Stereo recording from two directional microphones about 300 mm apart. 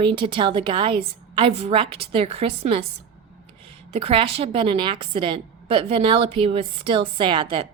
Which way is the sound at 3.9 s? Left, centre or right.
Centre.